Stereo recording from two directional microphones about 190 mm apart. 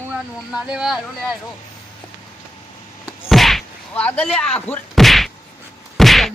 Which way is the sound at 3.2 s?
Centre (ahead or behind).